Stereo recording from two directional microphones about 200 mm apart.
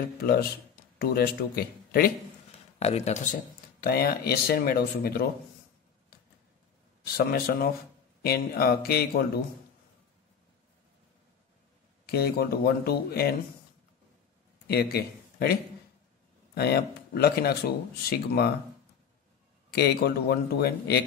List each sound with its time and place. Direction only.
0.2 s speech: 50° left (ahead or behind)
2.8 s speech: 35° left (ahead or behind)
3.8 s speech: 50° left (ahead or behind)
7.2 s speech: 50° left (ahead or behind)
12.1 s speech: 50° left (ahead or behind)
14.7 s speech: 50° left (ahead or behind)
16.5 s speech: 50° left (ahead or behind)
19.7 s speech: 55° left (ahead or behind)